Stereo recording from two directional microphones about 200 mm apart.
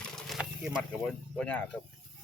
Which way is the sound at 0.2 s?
Centre (ahead or behind).